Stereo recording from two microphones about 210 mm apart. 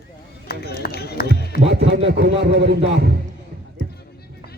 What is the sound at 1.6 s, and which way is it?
Music, 60° right (ahead or behind).